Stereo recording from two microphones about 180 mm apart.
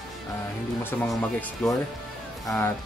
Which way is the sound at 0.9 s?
10° left (ahead or behind).